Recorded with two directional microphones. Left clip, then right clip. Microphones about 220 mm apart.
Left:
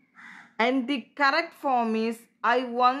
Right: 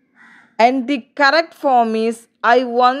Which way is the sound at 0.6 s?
35° right (ahead or behind).